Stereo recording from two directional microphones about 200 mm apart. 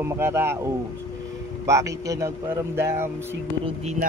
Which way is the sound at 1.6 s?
15° right (ahead or behind).